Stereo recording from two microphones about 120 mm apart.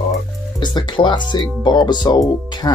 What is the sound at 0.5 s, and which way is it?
Speech, 40° left (ahead or behind).